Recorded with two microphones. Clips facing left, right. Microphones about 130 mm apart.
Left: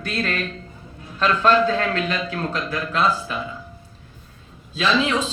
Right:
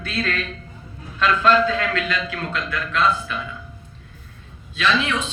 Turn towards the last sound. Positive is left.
turn(degrees=30)  # may be behind; listen again after turning